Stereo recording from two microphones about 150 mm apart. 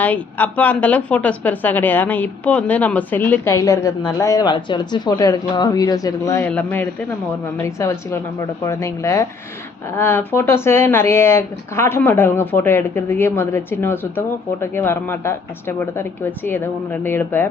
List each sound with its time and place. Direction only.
0.0 s speech: 10° left (ahead or behind)
3.5 s a woman's voice: 20° left (ahead or behind)
6.4 s a woman's voice: 10° left (ahead or behind)